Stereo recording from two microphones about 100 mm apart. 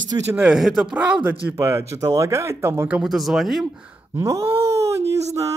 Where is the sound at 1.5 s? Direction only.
25° right (ahead or behind).